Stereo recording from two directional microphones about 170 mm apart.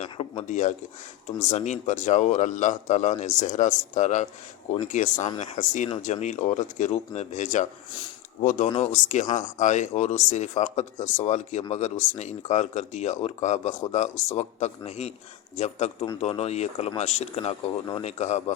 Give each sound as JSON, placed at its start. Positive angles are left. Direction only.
{"t": 0.2, "sound": "a man's voice", "side_deg": 40}
{"t": 5.1, "sound": "speech", "side_deg": 25}
{"t": 5.4, "sound": "a man's voice", "side_deg": 45}